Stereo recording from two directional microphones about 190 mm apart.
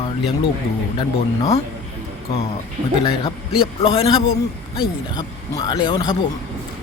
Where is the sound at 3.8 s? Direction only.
30° left (ahead or behind).